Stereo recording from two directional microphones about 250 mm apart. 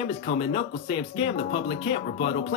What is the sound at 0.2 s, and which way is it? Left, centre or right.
Speech, left.